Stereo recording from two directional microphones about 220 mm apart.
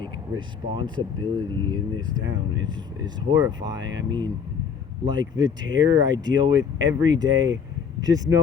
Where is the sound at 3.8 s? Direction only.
55° right (ahead or behind).